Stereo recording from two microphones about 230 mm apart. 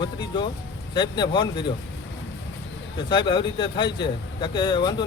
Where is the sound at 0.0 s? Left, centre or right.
Centre.